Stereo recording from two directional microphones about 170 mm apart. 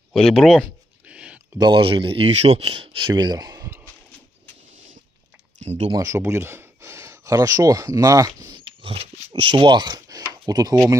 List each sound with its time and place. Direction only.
0.1 s a sound: centre (ahead or behind)
1.6 s speech: 30° right (ahead or behind)
5.6 s speech: 40° right (ahead or behind)
5.9 s speech: 20° right (ahead or behind)